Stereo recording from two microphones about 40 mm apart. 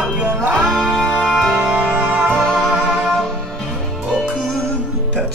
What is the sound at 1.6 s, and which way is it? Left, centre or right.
Music, right.